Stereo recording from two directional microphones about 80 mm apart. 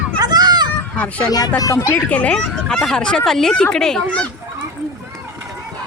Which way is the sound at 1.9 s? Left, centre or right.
Centre.